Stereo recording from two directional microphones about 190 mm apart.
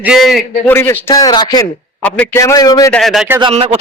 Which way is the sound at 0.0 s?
Centre (ahead or behind).